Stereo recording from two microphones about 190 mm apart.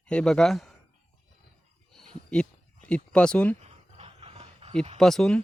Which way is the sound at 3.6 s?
30° right (ahead or behind).